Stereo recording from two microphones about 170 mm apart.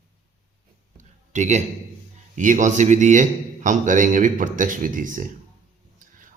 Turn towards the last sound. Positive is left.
turn(degrees=-50)  # may be behind; listen again after turning